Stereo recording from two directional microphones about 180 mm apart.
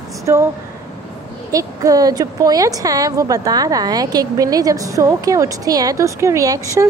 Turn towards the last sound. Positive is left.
turn(degrees=-20)  # may be behind; listen again after turning